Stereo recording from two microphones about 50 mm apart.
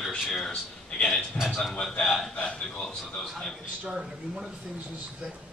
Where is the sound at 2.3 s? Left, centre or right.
Left.